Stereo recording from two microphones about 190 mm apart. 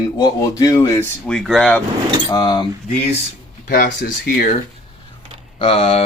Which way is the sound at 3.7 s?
50° left (ahead or behind).